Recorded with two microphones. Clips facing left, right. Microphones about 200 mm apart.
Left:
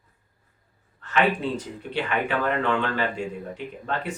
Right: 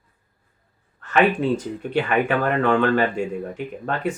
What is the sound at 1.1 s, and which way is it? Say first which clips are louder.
Speech: right 5 dB; 50° right (ahead or behind).